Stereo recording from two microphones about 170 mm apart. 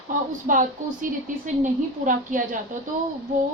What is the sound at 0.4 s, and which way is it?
Speech, 50° right (ahead or behind).